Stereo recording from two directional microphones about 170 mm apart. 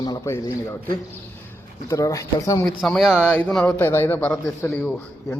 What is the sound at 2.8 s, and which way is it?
Speech, centre (ahead or behind).